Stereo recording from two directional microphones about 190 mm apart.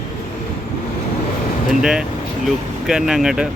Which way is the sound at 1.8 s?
5° right (ahead or behind).